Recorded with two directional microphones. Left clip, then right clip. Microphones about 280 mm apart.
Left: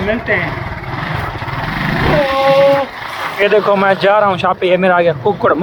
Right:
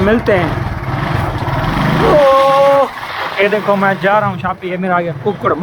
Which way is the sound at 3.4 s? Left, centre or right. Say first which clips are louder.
Left 2 dB; centre.